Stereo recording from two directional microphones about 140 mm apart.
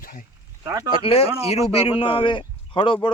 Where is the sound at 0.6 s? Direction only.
25° right (ahead or behind).